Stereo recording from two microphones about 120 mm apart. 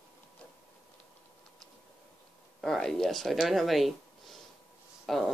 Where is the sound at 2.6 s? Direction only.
5° left (ahead or behind).